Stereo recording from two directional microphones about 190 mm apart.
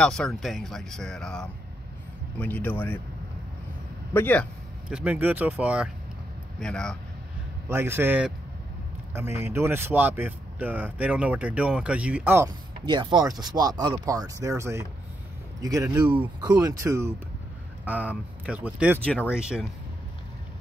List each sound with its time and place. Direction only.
0.0 s speech: 5° left (ahead or behind)
4.1 s speech: 10° left (ahead or behind)
4.8 s speech: 5° right (ahead or behind)
6.6 s speech: 5° left (ahead or behind)
7.7 s speech: 10° right (ahead or behind)
12.8 s speech: 25° right (ahead or behind); by 19.7 s 5° right (ahead or behind)